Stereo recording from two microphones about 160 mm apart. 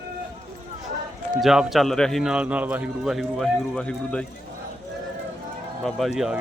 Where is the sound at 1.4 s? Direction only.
Centre (ahead or behind).